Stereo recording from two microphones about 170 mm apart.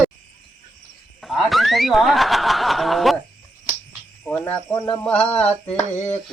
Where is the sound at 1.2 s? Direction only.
Centre (ahead or behind).